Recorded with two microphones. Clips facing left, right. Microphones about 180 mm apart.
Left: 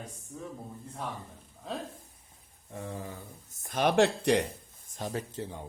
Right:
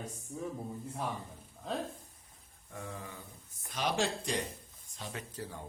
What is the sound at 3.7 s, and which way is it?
Speech, 55° left (ahead or behind).